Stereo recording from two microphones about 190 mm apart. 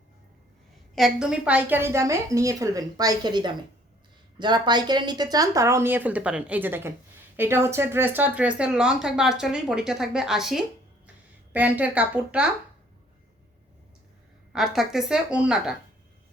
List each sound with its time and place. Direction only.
0.9 s speech: centre (ahead or behind)
14.5 s speech: centre (ahead or behind)